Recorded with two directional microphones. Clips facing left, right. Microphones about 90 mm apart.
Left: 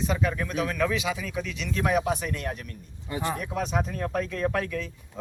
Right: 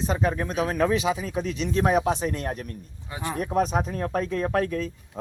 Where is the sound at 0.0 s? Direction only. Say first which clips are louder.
Right 2 dB; 35° right (ahead or behind).